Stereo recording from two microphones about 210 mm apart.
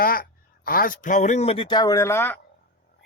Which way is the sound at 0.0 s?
45° left (ahead or behind).